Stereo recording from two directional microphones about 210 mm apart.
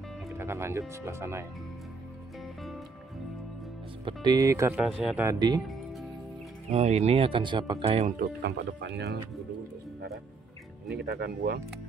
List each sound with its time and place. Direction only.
0.4 s speech: 10° right (ahead or behind)
4.0 s speech: 20° right (ahead or behind)
4.8 s speech: centre (ahead or behind)
5.2 s speech: 15° right (ahead or behind)
6.7 s speech: 30° right (ahead or behind)
8.2 s speech: 50° right (ahead or behind)
11.0 s speech: 50° right (ahead or behind)